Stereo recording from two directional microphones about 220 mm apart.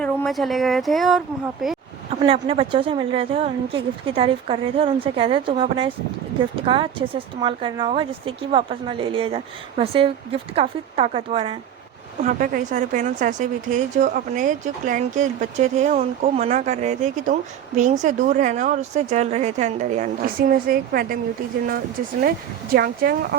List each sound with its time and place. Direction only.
0.0 s speech: centre (ahead or behind)
2.2 s speech: 25° right (ahead or behind)
12.2 s speech: 35° right (ahead or behind)
22.7 s speech: 45° right (ahead or behind)